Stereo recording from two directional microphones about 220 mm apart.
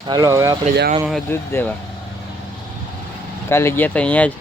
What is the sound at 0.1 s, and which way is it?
Speech, 15° right (ahead or behind).